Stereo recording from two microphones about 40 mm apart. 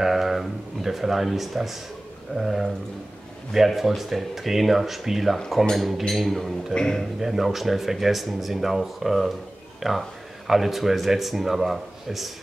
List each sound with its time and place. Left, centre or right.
0.0 s speech: centre
2.3 s a sound: centre
3.5 s speech: centre
6.7 s a man's voice: centre
7.2 s speech: centre